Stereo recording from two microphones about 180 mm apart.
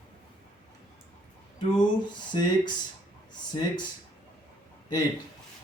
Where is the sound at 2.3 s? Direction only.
25° left (ahead or behind).